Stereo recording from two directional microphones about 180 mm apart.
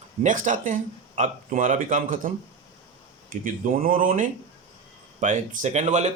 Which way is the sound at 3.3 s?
45° right (ahead or behind).